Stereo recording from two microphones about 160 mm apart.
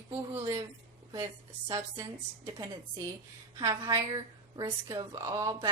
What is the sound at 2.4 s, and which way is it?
A woman's voice, 20° right (ahead or behind).